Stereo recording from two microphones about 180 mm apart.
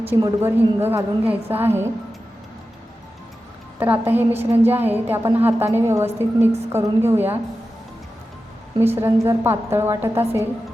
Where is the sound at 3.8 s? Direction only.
10° right (ahead or behind).